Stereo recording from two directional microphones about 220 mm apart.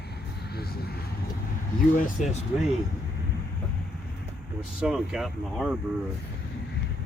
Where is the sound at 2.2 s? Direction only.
35° left (ahead or behind).